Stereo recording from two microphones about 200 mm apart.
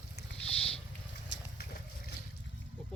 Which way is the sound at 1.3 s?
60° left (ahead or behind).